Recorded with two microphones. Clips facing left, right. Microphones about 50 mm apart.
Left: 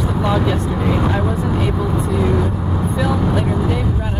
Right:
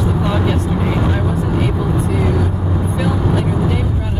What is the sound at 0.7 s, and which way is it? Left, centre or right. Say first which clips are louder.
Vehicle: even; centre.